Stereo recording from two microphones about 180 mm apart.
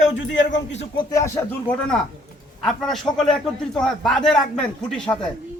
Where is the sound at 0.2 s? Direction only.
90° left.